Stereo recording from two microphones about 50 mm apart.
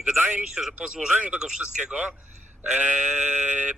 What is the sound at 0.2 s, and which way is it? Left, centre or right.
Speech, right.